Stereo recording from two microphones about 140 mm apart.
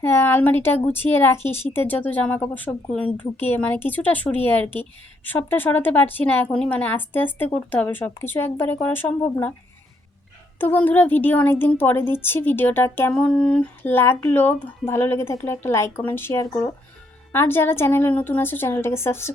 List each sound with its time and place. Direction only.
0.0 s a woman's voice: 15° left (ahead or behind)
10.6 s a woman's voice: 10° left (ahead or behind)